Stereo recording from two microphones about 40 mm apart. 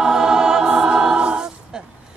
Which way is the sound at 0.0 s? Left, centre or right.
Centre.